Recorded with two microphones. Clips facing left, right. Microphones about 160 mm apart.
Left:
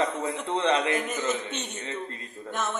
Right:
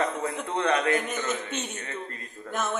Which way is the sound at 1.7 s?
25° left (ahead or behind).